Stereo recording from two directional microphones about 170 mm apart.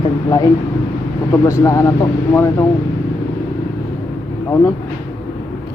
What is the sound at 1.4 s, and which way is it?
Speech, 15° left (ahead or behind).